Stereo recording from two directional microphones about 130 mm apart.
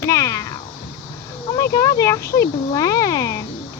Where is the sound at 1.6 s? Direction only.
25° left (ahead or behind).